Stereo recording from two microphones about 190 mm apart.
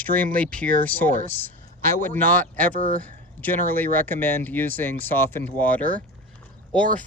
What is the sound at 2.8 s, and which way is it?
Speech, 45° right (ahead or behind).